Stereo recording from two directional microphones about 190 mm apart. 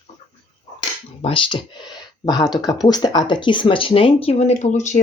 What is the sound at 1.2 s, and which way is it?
Speech, 30° left (ahead or behind).